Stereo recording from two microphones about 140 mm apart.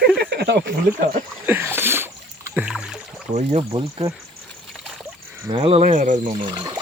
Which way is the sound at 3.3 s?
45° right (ahead or behind).